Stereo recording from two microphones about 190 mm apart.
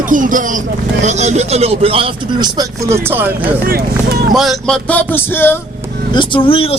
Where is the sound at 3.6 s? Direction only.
50° right (ahead or behind).